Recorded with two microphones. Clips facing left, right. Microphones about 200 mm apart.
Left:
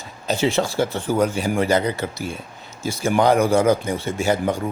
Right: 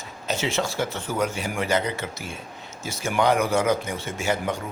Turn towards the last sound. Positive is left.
turn(degrees=35)  # may be behind; listen again after turning